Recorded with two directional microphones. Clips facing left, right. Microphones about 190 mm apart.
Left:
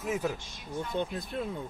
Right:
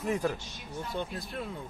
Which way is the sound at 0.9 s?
20° left (ahead or behind).